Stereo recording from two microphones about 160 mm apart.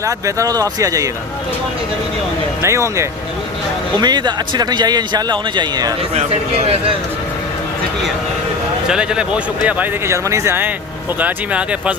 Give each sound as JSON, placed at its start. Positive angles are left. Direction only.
{"t": 0.0, "sound": "a man's voice", "side_deg": -20}
{"t": 2.6, "sound": "a man's voice", "side_deg": -15}
{"t": 6.1, "sound": "a man's voice", "side_deg": -40}
{"t": 8.9, "sound": "speech", "side_deg": -5}